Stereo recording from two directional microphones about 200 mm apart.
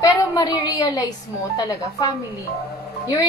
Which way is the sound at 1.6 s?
20° left (ahead or behind).